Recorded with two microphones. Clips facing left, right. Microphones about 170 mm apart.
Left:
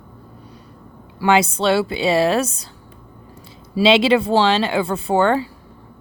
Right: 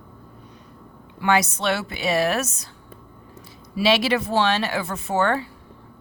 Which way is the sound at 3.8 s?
25° left (ahead or behind).